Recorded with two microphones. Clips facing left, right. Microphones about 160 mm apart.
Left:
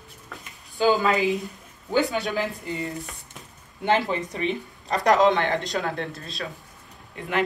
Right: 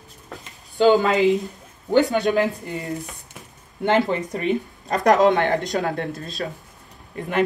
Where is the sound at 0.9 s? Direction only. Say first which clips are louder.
Right 3 dB; 20° right (ahead or behind).